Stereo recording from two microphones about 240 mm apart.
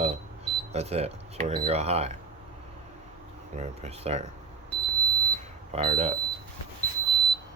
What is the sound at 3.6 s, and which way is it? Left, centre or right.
Speech, right.